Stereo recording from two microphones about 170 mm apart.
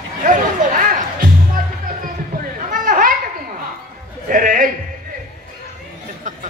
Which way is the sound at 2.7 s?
55° right (ahead or behind).